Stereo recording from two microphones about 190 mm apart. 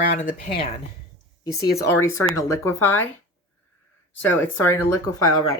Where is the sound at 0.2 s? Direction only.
40° left (ahead or behind).